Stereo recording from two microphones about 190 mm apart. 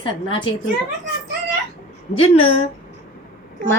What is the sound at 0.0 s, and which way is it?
Speech, 25° left (ahead or behind).